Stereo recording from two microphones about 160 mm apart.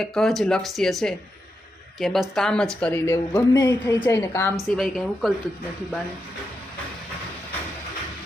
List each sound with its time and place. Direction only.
0.0 s speech: centre (ahead or behind)
2.8 s speech: 15° left (ahead or behind)
4.8 s speech: centre (ahead or behind)